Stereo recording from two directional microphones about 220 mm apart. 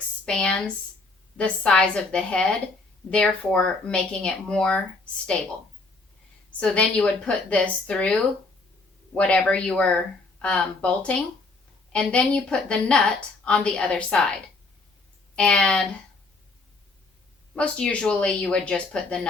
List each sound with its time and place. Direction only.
0.3 s a woman's voice: 5° left (ahead or behind)
6.6 s a woman's voice: 5° left (ahead or behind)
15.4 s a woman's voice: 5° left (ahead or behind)
17.5 s a woman's voice: 5° left (ahead or behind)